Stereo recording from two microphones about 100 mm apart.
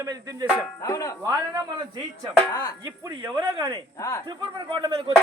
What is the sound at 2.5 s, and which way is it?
Speech, 40° left (ahead or behind).